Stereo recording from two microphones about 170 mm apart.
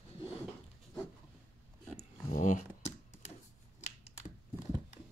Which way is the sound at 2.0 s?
45° left (ahead or behind).